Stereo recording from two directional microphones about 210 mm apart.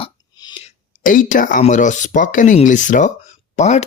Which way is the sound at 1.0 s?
40° left (ahead or behind).